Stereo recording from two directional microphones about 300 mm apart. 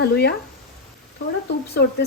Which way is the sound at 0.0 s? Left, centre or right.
Left.